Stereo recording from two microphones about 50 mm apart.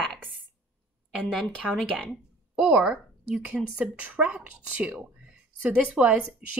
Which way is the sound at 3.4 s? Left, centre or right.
Right.